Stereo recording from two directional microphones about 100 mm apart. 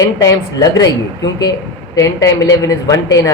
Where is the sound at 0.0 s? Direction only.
35° left (ahead or behind).